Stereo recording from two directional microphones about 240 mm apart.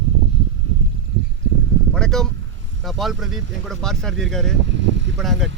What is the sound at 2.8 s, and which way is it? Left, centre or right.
Speech, centre.